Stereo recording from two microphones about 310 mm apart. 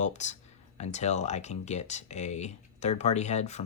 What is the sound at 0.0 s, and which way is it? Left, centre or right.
Speech, left.